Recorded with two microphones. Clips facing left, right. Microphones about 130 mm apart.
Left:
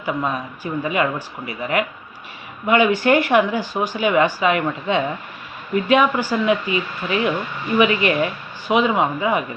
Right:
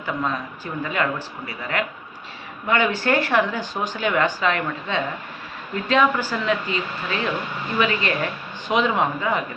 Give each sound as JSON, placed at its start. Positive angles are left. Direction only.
{"t": 0.0, "sound": "speech", "side_deg": 15}